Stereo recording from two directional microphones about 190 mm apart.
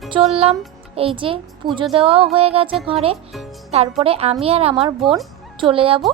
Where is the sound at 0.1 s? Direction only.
30° right (ahead or behind).